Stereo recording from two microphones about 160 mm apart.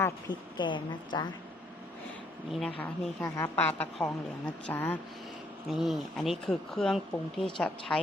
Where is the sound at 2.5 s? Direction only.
5° left (ahead or behind).